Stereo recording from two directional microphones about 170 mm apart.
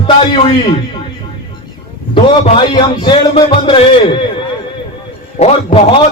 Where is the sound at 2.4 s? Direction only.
30° left (ahead or behind).